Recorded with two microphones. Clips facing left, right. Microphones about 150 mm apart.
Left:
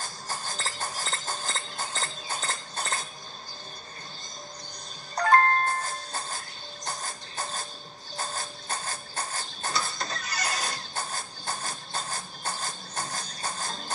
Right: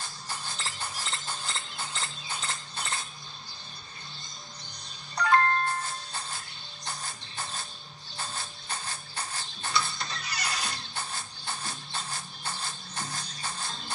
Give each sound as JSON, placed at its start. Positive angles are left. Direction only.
{"t": 0.0, "sound": "clip-clop", "side_deg": 45}
{"t": 5.1, "sound": "music", "side_deg": 45}
{"t": 8.2, "sound": "printer", "side_deg": 45}